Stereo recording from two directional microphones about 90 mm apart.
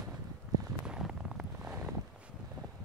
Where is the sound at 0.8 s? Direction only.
10° right (ahead or behind).